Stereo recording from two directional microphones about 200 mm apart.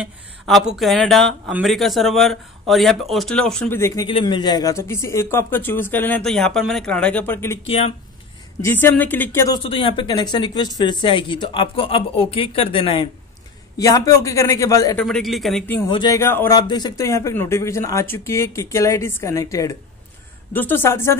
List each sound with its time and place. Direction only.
0.0 s speech: centre (ahead or behind)
3.8 s speech: 15° left (ahead or behind)
7.6 s speech: 30° left (ahead or behind)
8.5 s speech: 10° left (ahead or behind)
9.6 s speech: 25° left (ahead or behind)
15.0 s speech: centre (ahead or behind)
15.9 s speech: 20° left (ahead or behind)